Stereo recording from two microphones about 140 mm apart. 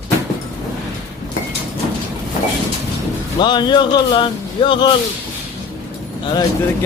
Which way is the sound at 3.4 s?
30° left (ahead or behind).